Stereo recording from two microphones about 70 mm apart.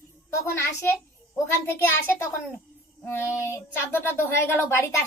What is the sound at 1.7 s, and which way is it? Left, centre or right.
Speech, left.